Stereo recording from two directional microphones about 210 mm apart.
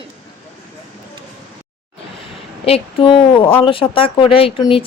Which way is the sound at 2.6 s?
25° left (ahead or behind).